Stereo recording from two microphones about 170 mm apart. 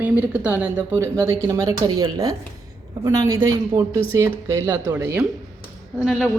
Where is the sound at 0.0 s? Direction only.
10° right (ahead or behind).